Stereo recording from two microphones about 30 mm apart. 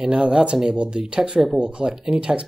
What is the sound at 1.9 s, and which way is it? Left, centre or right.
Speech, right.